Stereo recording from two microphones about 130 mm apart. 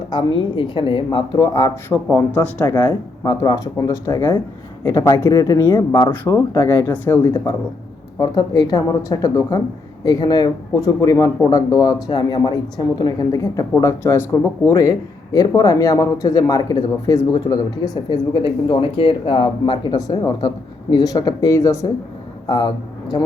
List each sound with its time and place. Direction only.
0.1 s speech: 40° left (ahead or behind)
1.9 s speech: 15° left (ahead or behind)
6.9 s speech: 15° left (ahead or behind)
7.2 s speech: 25° left (ahead or behind)
17.9 s speech: 40° left (ahead or behind); by 21.8 s 25° left (ahead or behind)
22.4 s speech: 35° left (ahead or behind)